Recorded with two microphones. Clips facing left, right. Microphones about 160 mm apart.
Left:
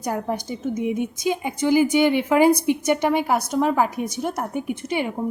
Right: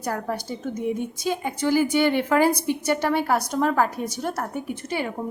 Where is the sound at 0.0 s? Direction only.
15° left (ahead or behind).